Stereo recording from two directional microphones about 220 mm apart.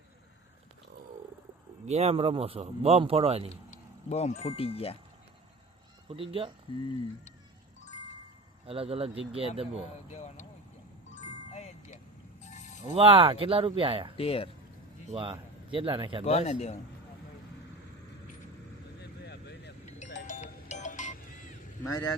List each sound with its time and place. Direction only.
1.9 s speech: 30° right (ahead or behind)
3.5 s speech: 30° left (ahead or behind)
6.1 s speech: 25° right (ahead or behind)
8.6 s speech: 25° right (ahead or behind)
10.1 s speech: 30° left (ahead or behind)
11.1 s music: 30° left (ahead or behind)
12.4 s a sound: 35° left (ahead or behind)
12.9 s speech: 25° right (ahead or behind)
14.2 s speech: 25° left (ahead or behind)
15.1 s a man's voice: 25° right (ahead or behind)
16.2 s speech: 30° left (ahead or behind)
19.2 s vehicle: 50° left (ahead or behind)
20.1 s music: 35° left (ahead or behind)
21.8 s a man's voice: 15° left (ahead or behind)